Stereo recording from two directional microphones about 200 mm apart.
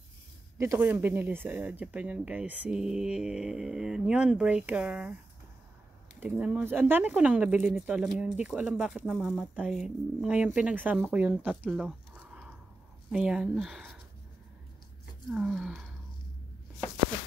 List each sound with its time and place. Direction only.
0.6 s speech: 10° right (ahead or behind)
6.1 s speech: 5° right (ahead or behind)
15.3 s speech: centre (ahead or behind)